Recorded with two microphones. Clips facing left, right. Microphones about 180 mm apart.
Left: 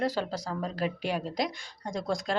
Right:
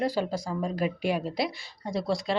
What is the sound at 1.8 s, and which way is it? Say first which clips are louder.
Speech: right 3 dB; 5° right (ahead or behind).